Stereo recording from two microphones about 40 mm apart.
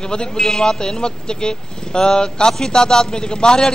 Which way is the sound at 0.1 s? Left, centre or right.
Left.